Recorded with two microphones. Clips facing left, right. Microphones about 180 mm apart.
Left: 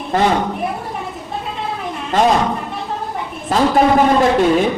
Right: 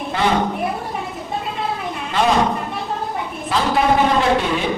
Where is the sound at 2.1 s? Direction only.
45° left (ahead or behind).